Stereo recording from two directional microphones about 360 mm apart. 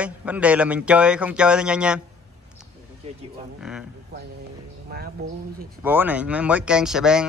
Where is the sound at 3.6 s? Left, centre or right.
Centre.